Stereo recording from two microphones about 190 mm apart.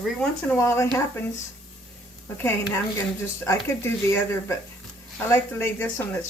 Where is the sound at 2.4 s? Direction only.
15° left (ahead or behind).